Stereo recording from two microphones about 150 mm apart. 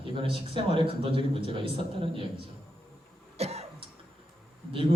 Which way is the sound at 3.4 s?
45° right (ahead or behind).